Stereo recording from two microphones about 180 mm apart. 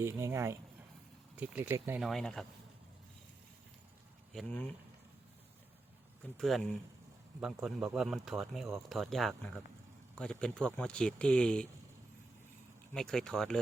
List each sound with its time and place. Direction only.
0.0 s speech: 15° right (ahead or behind)
2.0 s speech: centre (ahead or behind)
4.3 s speech: 5° left (ahead or behind)
6.3 s speech: 5° left (ahead or behind)
12.9 s speech: 5° left (ahead or behind)